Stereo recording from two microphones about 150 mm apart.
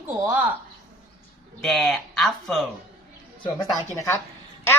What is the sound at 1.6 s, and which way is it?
Speech, centre (ahead or behind).